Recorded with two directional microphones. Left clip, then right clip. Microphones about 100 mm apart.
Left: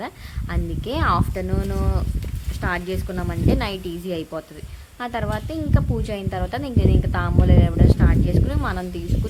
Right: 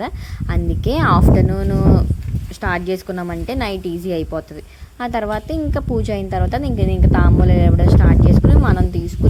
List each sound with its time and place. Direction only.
0.0 s a woman's voice: 45° right (ahead or behind)